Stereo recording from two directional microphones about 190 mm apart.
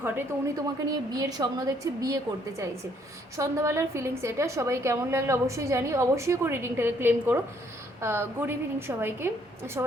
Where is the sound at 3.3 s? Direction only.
15° right (ahead or behind).